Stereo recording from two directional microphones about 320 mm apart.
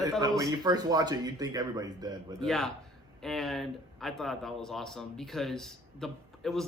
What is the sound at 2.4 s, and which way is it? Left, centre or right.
Speech, centre.